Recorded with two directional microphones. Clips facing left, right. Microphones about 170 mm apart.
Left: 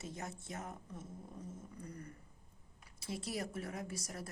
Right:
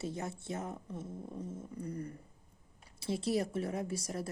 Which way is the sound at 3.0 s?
30° right (ahead or behind).